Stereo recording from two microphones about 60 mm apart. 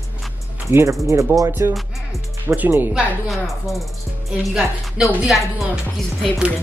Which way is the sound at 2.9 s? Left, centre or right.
Centre.